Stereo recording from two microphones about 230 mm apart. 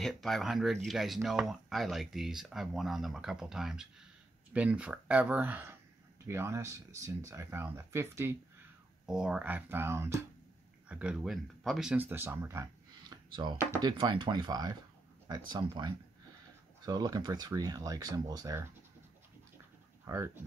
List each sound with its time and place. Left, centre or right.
0.0 s speech: centre
20.1 s speech: centre